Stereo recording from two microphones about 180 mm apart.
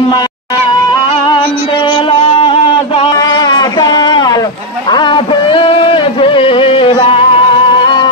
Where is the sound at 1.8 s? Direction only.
25° left (ahead or behind).